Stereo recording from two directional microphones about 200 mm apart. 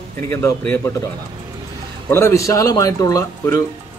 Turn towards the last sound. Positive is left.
turn(degrees=15)  # may be behind; listen again after turning